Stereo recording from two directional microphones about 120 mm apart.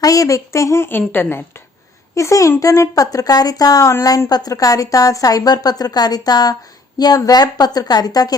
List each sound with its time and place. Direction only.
0.0 s a woman's voice: 30° left (ahead or behind)